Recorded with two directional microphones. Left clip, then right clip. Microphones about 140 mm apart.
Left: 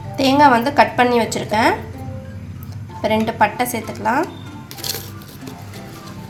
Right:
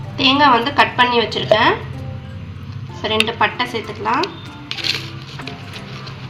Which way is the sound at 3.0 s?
55° left (ahead or behind).